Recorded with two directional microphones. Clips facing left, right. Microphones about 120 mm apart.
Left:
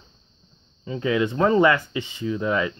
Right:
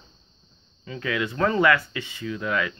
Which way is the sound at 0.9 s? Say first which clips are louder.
Left 5 dB; 25° left (ahead or behind).